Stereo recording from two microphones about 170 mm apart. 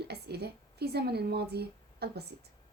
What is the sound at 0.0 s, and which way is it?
A woman's voice, 70° right (ahead or behind).